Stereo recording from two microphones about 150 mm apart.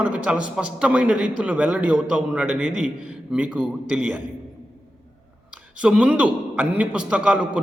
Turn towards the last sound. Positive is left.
turn(degrees=-5)  # may be behind; listen again after turning